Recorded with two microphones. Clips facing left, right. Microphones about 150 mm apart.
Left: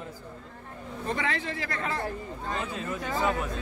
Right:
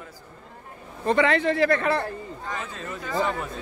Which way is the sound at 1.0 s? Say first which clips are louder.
Right 10 dB; 75° right (ahead or behind).